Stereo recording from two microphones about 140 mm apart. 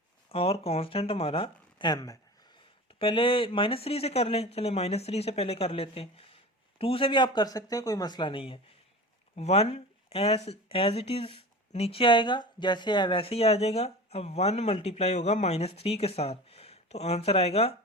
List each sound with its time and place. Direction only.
0.3 s speech: 45° left (ahead or behind); by 2.1 s 30° left (ahead or behind)
3.0 s speech: 40° left (ahead or behind)
9.3 s speech: 50° left (ahead or behind)